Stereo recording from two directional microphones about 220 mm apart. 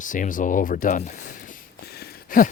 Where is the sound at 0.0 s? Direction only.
35° left (ahead or behind).